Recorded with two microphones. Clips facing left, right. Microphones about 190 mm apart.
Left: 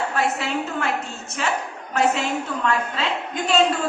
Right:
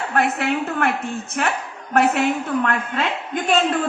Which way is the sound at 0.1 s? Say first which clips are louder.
Right 3 dB; 55° right (ahead or behind).